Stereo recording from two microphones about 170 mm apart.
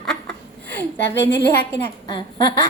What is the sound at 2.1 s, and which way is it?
Speech, 25° left (ahead or behind).